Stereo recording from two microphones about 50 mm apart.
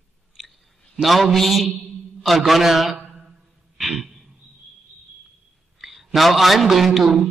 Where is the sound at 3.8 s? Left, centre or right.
Centre.